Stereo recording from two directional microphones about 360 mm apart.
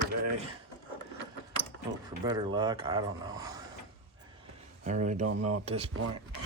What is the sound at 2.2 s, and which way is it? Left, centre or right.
Speech, centre.